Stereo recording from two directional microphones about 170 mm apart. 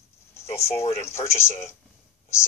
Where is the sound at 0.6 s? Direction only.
15° left (ahead or behind).